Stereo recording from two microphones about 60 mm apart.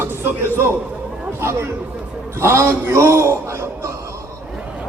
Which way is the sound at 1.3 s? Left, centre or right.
Right.